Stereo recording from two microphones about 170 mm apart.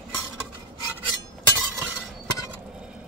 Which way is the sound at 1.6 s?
10° right (ahead or behind).